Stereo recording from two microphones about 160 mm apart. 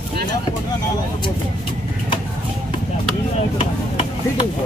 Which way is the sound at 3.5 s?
35° left (ahead or behind).